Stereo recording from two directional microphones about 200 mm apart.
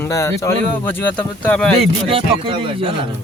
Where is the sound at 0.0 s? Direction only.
15° left (ahead or behind).